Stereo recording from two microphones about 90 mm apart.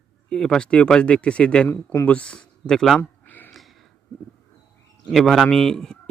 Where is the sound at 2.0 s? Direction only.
15° left (ahead or behind).